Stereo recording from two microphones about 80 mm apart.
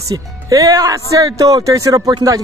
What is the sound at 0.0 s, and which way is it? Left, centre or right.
Speech, right.